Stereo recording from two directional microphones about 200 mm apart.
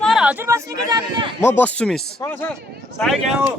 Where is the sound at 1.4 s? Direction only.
10° left (ahead or behind).